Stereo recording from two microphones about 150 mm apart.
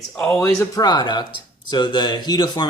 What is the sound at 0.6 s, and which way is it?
Speech, 25° left (ahead or behind).